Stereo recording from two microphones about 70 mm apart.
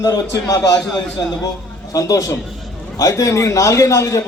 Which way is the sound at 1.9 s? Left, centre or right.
Left.